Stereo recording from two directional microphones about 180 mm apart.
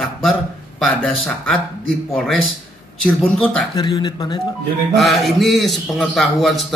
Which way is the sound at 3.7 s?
25° left (ahead or behind).